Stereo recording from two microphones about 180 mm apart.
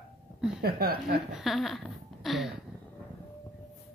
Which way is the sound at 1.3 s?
Centre (ahead or behind).